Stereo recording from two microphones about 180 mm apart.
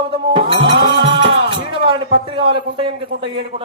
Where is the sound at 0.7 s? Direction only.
65° right (ahead or behind).